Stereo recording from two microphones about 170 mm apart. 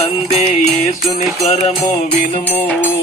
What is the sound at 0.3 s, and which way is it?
Music, 35° left (ahead or behind).